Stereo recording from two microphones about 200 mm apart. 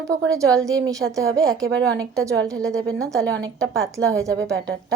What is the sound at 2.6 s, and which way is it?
Speech, 5° left (ahead or behind).